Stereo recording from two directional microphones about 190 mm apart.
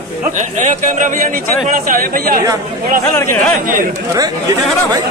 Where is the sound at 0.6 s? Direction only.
40° right (ahead or behind).